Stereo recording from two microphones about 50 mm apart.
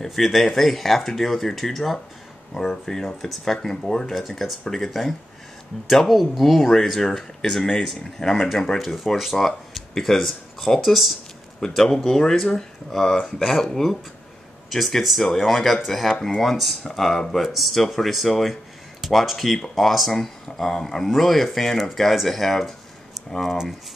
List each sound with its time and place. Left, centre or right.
0.0 s speech: centre
16.1 s speech: centre
16.3 s speech: centre